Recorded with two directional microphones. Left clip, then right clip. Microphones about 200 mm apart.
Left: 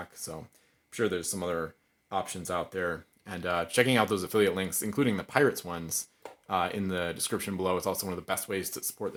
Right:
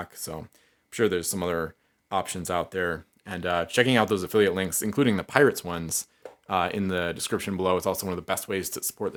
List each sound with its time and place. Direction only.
0.0 s speech: 25° right (ahead or behind)